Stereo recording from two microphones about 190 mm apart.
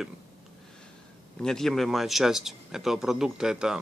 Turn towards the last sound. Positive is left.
turn(degrees=-5)  # may be behind; listen again after turning